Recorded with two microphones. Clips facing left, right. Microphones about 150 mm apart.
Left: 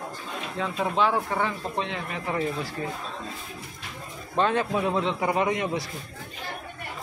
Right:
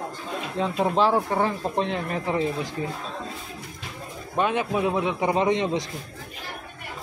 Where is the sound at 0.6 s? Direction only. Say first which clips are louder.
Right 3 dB; 30° right (ahead or behind).